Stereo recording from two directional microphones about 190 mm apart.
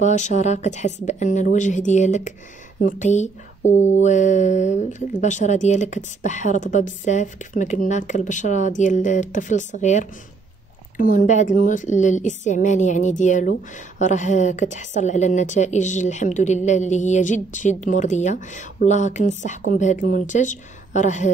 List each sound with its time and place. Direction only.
0.0 s a woman's voice: 40° left (ahead or behind)